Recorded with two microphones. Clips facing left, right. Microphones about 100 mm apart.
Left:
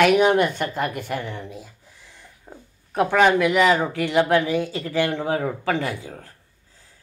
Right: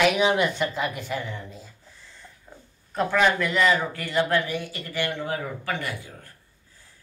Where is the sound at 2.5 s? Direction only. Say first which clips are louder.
Left 6 dB; 40° left (ahead or behind).